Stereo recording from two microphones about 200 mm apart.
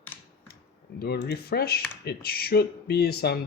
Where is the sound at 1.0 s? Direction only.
55° left (ahead or behind).